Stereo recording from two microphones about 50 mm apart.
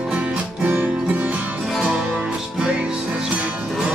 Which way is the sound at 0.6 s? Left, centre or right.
Right.